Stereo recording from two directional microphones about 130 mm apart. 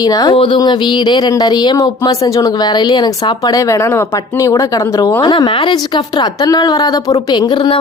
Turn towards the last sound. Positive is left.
turn(degrees=35)  # may be behind; listen again after turning